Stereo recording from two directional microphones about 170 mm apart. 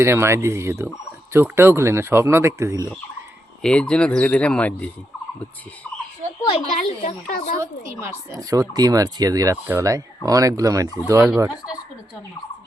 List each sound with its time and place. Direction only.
0.0 s speech: 15° right (ahead or behind)
3.6 s speech: 5° left (ahead or behind)
6.4 s speech: 35° left (ahead or behind)
7.3 s a woman's voice: 55° left (ahead or behind)
7.6 s speech: 20° right (ahead or behind)